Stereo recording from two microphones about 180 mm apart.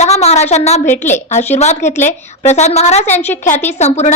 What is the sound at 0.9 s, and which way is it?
Speech, 10° left (ahead or behind).